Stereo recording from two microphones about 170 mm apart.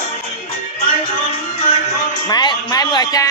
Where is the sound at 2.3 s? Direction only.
25° left (ahead or behind).